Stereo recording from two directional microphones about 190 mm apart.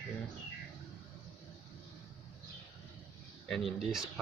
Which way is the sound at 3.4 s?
Centre (ahead or behind).